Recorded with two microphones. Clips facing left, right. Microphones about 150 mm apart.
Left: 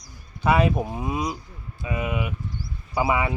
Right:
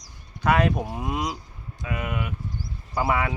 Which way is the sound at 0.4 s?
10° left (ahead or behind).